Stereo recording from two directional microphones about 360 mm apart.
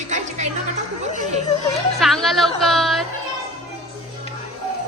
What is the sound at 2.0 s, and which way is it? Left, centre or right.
Speech, centre.